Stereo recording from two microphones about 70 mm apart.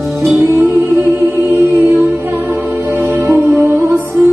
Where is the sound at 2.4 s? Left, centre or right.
Right.